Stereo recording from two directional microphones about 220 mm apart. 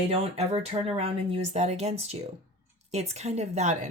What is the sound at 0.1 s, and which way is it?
Speech, 25° right (ahead or behind).